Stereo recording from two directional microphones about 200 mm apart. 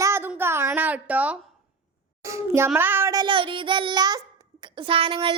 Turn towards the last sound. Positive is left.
turn(degrees=-25)  # may be behind; listen again after turning